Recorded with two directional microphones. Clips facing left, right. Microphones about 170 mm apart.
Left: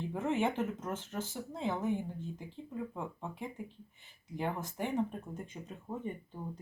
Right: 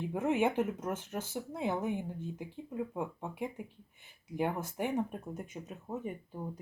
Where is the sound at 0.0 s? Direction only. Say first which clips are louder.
Right 2 dB; 15° right (ahead or behind).